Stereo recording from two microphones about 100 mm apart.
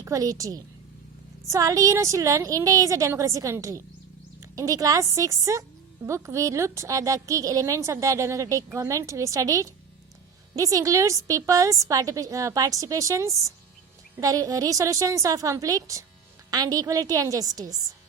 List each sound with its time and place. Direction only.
0.0 s a woman's voice: 35° right (ahead or behind)